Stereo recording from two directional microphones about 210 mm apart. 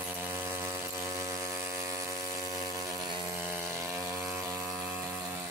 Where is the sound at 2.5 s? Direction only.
15° right (ahead or behind).